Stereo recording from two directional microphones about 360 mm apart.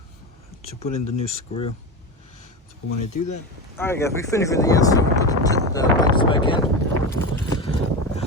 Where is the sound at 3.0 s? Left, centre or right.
Left.